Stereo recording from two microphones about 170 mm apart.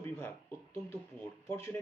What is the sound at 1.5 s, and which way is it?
Speech, 15° left (ahead or behind).